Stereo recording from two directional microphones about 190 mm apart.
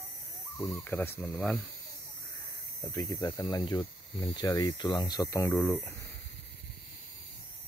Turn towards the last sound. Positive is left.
turn(degrees=15)  # may be behind; listen again after turning